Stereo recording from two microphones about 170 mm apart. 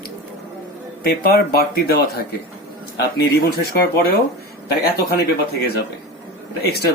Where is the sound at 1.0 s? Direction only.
65° left (ahead or behind).